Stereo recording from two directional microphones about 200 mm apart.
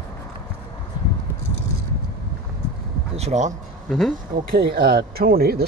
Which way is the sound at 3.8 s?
Centre (ahead or behind).